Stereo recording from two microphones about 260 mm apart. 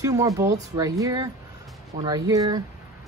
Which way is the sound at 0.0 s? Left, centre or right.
Centre.